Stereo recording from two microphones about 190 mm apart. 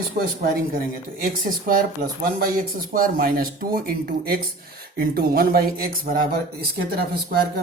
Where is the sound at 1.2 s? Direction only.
50° right (ahead or behind).